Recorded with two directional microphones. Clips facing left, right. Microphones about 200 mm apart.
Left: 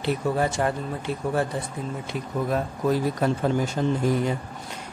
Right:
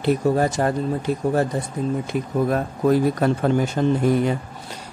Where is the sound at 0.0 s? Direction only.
40° right (ahead or behind).